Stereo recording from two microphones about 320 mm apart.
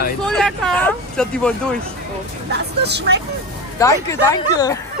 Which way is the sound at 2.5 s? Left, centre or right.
Right.